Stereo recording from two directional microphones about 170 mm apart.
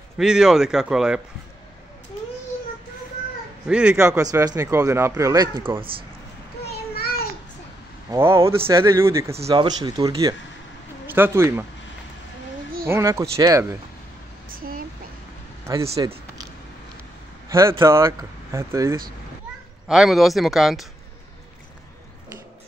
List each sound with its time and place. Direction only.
0.2 s speech: 5° right (ahead or behind)
3.6 s speech: 5° right (ahead or behind)
4.2 s speech: 20° right (ahead or behind)
6.7 s a sound: 65° left (ahead or behind)
8.1 s speech: 15° right (ahead or behind)
12.8 s speech: 15° right (ahead or behind)
14.5 s a sound: 55° right (ahead or behind)
15.6 s speech: 20° right (ahead or behind)
16.0 s a sound: 25° right (ahead or behind)
17.5 s speech: 15° right (ahead or behind)
19.9 s speech: centre (ahead or behind)